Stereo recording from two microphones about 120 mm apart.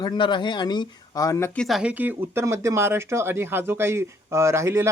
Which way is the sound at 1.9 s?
15° right (ahead or behind).